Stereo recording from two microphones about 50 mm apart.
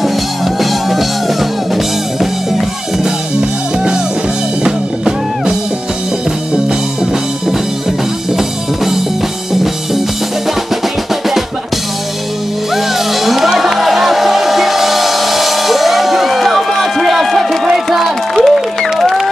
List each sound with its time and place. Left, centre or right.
0.6 s music: centre
2.1 s music: centre
3.3 s music: centre
8.4 s music: centre
12.7 s music: centre
17.8 s a sound: centre